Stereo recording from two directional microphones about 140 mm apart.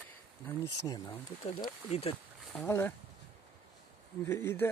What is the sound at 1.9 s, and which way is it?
Speech, 50° left (ahead or behind).